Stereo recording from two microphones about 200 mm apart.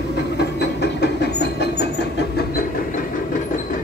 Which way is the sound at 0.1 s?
55° left (ahead or behind).